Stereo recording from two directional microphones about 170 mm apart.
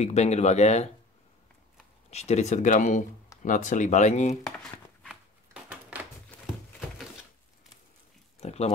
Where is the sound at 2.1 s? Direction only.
40° left (ahead or behind).